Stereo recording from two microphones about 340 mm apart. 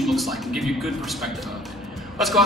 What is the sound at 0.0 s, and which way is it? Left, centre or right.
A man's voice, centre.